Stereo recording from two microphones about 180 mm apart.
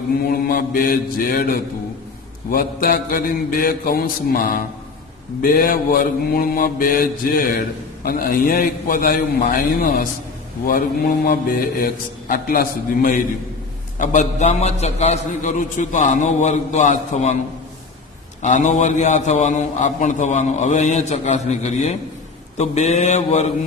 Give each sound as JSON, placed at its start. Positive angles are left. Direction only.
{"t": 0.4, "sound": "a man's voice", "side_deg": 55}
{"t": 18.4, "sound": "a man's voice", "side_deg": 40}